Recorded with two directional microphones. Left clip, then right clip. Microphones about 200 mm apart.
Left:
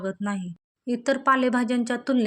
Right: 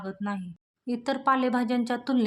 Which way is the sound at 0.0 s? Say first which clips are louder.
Left 4 dB; 15° left (ahead or behind).